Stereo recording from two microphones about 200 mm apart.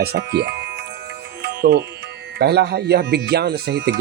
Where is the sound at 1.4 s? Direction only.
55° right (ahead or behind).